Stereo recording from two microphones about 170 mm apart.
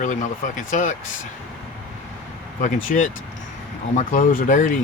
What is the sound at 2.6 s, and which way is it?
Speech, 50° left (ahead or behind).